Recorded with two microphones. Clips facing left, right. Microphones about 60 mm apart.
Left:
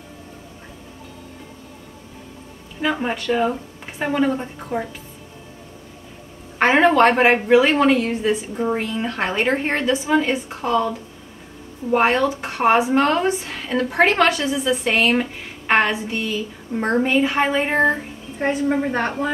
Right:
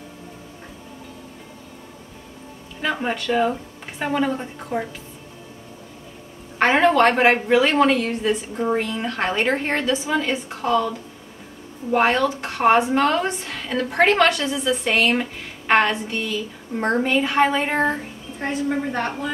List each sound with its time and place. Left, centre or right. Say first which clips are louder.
2.8 s speech: left 2 dB; centre
6.6 s a woman's voice: left 2 dB; centre
18.4 s a woman's voice: left 4 dB; centre